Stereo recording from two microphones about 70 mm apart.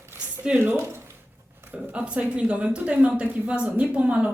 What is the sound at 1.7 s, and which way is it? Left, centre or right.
A woman's voice, centre.